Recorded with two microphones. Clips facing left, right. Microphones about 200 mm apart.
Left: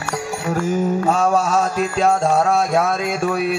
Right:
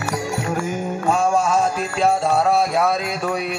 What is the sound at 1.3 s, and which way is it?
Mantra, 40° left (ahead or behind).